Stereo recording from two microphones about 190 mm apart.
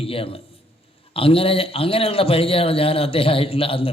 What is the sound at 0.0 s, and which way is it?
A man's voice, 30° left (ahead or behind).